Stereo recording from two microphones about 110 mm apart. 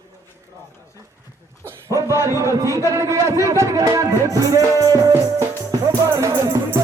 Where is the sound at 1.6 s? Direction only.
30° right (ahead or behind).